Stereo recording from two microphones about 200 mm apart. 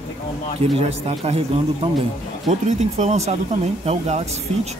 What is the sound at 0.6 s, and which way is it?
Speech, 30° right (ahead or behind).